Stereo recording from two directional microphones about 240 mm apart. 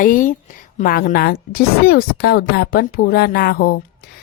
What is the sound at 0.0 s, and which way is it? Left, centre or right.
A woman's voice, left.